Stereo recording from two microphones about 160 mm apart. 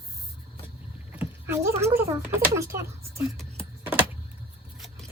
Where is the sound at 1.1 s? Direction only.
15° right (ahead or behind).